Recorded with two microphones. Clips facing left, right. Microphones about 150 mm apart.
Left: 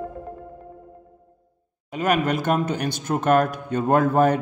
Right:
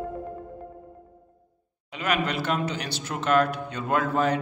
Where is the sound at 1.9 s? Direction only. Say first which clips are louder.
Left 5 dB; 45° left (ahead or behind).